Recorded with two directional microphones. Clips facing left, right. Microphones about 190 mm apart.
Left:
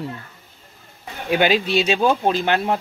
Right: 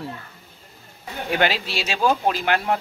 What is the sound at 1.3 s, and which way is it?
Speech, 20° left (ahead or behind).